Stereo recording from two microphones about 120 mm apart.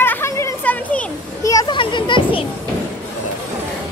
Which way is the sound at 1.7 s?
40° left (ahead or behind).